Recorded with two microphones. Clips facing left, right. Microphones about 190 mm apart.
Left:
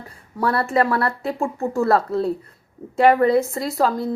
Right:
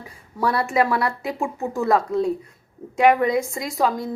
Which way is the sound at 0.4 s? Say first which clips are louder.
Left 1 dB; 15° right (ahead or behind).